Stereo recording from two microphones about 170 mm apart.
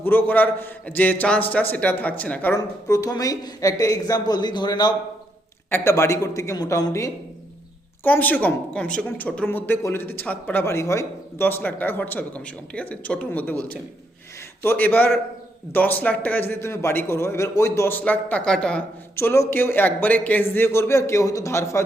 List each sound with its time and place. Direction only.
0.0 s speech: 10° left (ahead or behind)
19.1 s speech: 15° left (ahead or behind)